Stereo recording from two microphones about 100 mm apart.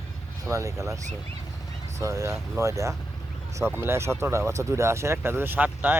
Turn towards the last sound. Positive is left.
turn(degrees=-15)  # may be behind; listen again after turning